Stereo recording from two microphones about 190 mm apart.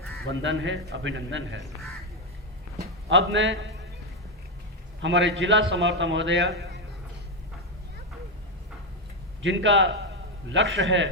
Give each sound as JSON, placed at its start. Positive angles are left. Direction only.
{"t": 0.3, "sound": "a man's voice", "side_deg": -75}
{"t": 2.7, "sound": "a man's voice", "side_deg": -75}
{"t": 5.0, "sound": "a man's voice", "side_deg": -70}
{"t": 9.4, "sound": "a man's voice", "side_deg": -75}